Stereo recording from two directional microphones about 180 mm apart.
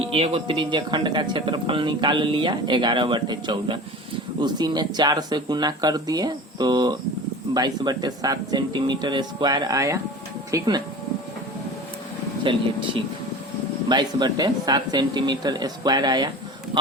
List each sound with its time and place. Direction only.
0.0 s speech: 30° right (ahead or behind)
12.4 s speech: 30° right (ahead or behind)